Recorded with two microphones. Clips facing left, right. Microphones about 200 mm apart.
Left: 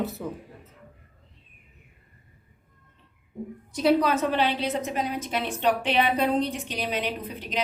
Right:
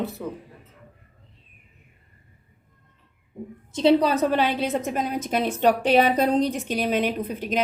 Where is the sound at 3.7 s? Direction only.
30° right (ahead or behind).